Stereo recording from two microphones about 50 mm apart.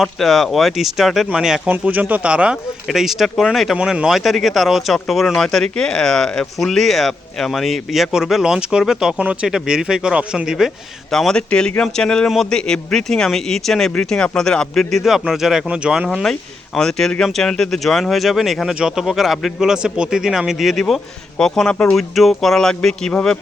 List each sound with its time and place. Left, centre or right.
0.0 s speech: centre
1.8 s speech: right
2.2 s speech: right
2.9 s speech: centre
9.1 s speech: right
9.5 s speech: centre
11.1 s speech: centre
14.9 s speech: centre
15.7 s speech: centre
16.2 s speech: centre
18.7 s speech: centre
21.3 s speech: centre
21.9 s speech: centre